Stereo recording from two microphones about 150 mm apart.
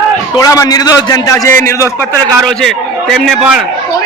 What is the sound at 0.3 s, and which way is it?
A man's voice, 25° left (ahead or behind).